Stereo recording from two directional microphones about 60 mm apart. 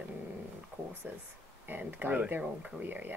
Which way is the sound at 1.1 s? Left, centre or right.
Right.